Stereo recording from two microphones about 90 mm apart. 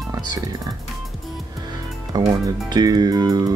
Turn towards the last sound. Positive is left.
turn(degrees=-45)  # may be behind; listen again after turning